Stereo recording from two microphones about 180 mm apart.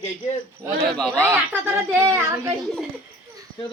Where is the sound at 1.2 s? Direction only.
15° right (ahead or behind).